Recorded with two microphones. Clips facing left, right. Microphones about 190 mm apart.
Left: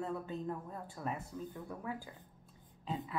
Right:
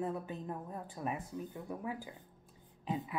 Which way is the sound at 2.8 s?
15° right (ahead or behind).